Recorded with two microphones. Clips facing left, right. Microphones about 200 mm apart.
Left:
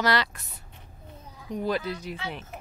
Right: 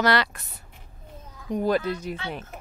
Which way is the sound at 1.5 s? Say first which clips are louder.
Right 5 dB; 50° right (ahead or behind).